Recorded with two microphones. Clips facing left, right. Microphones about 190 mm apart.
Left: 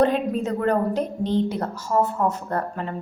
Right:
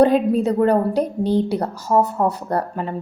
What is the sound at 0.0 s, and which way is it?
A woman's voice, 35° right (ahead or behind).